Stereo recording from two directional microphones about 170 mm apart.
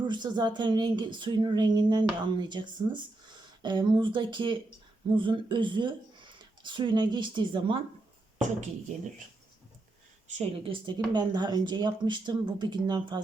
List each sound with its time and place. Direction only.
0.0 s speech: 25° right (ahead or behind)
10.2 s speech: 35° right (ahead or behind)